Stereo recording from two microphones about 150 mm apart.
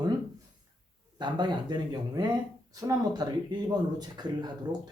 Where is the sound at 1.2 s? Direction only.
30° right (ahead or behind).